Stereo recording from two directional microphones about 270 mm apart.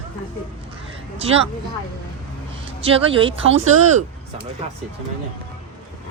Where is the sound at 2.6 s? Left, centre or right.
Right.